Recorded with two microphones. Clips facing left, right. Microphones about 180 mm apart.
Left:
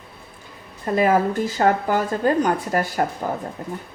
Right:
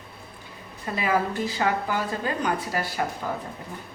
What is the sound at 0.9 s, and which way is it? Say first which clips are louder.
A woman's voice: left 7 dB; 45° left (ahead or behind).